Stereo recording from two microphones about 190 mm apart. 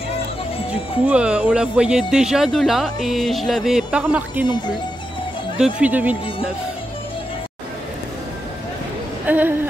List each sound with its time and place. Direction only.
1.0 s speech: 5° right (ahead or behind)
4.5 s speech: 25° left (ahead or behind)
5.6 s speech: 5° right (ahead or behind)
9.2 s speech: 10° right (ahead or behind)